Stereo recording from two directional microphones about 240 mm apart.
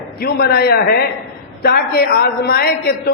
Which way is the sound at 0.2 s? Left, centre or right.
Left.